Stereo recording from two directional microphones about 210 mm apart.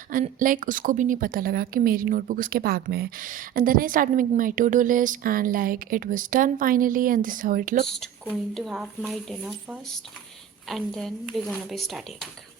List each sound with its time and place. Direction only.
0.1 s a woman's voice: 40° right (ahead or behind)
7.9 s speech: centre (ahead or behind)